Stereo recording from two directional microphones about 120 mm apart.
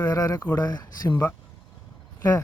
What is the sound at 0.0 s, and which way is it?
Speech, 30° left (ahead or behind).